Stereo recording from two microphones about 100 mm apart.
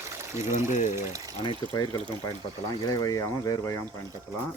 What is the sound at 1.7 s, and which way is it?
Speech, 40° left (ahead or behind).